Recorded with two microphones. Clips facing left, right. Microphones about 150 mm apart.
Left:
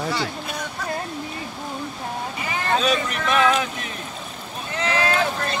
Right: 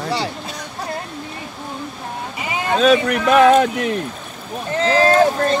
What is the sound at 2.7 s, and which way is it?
Speech, 60° right (ahead or behind).